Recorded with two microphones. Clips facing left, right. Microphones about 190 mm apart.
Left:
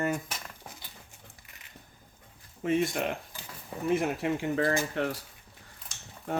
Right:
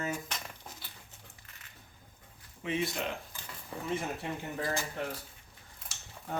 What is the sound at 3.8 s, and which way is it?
Speech, 80° left.